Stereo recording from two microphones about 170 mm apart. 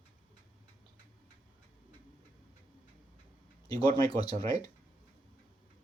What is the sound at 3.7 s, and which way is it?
Speech, 20° left (ahead or behind).